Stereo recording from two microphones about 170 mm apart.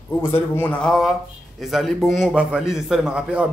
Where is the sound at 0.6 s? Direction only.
5° left (ahead or behind).